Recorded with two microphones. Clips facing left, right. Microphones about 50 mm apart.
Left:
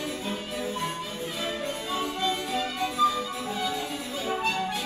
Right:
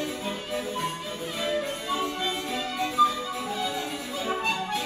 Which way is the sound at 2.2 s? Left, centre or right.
Centre.